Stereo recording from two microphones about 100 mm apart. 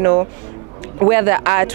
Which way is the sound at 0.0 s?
30° right (ahead or behind).